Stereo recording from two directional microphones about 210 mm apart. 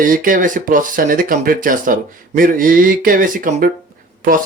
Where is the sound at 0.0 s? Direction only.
40° right (ahead or behind).